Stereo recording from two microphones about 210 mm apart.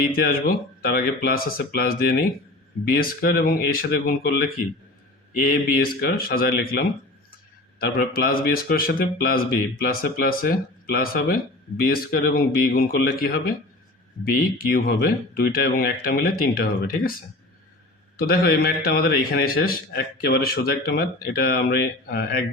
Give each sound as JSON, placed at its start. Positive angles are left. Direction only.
{"t": 0.3, "sound": "a man's voice", "side_deg": 45}
{"t": 5.7, "sound": "a man's voice", "side_deg": 45}
{"t": 14.7, "sound": "a man's voice", "side_deg": 45}
{"t": 18.2, "sound": "a man's voice", "side_deg": 45}